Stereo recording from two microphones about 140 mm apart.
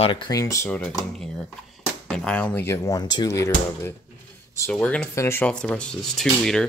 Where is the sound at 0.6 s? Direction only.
10° left (ahead or behind).